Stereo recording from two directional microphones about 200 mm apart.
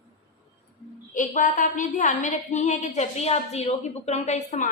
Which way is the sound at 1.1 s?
40° left (ahead or behind).